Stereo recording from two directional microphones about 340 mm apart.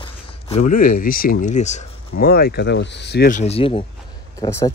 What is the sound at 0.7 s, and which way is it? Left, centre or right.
Speech, left.